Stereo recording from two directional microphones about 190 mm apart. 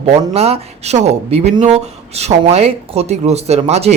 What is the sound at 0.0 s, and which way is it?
Speech, 35° right (ahead or behind).